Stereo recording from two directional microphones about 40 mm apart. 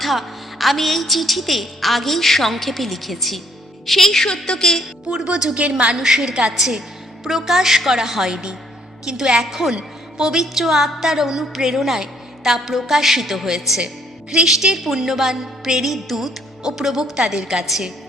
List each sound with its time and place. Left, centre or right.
0.0 s a woman's voice: centre
4.4 s music: centre
5.0 s a woman's voice: right
5.9 s a woman's voice: centre